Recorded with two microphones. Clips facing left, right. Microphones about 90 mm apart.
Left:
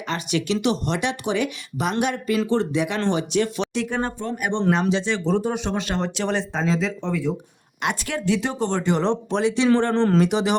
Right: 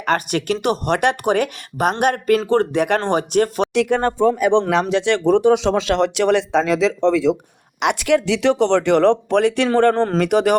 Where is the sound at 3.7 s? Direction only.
70° right (ahead or behind); by 7.4 s 90° right.